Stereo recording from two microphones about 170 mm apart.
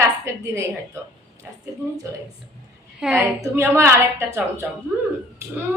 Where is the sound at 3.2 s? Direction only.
15° right (ahead or behind).